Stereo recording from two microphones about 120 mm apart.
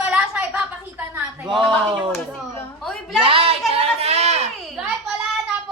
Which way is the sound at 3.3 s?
50° right (ahead or behind).